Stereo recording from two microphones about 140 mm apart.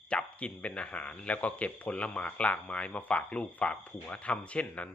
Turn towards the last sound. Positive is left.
turn(degrees=10)  # may be behind; listen again after turning